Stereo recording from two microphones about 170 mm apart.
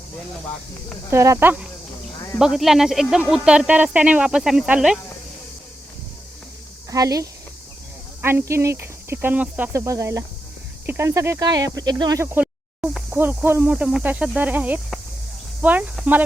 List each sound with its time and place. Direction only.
1.1 s speech: 15° right (ahead or behind)
2.1 s a sound: 20° left (ahead or behind)
2.4 s speech: centre (ahead or behind)
6.9 s speech: 20° right (ahead or behind)